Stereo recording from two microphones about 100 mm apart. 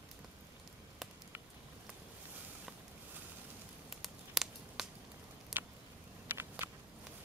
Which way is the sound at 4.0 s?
Centre (ahead or behind).